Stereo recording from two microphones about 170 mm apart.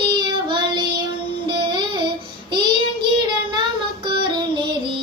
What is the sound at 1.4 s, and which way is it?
Music, 30° right (ahead or behind).